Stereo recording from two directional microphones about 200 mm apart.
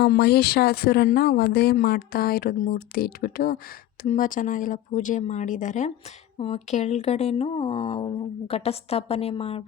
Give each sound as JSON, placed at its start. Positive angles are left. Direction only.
{"t": 0.0, "sound": "speech", "side_deg": 50}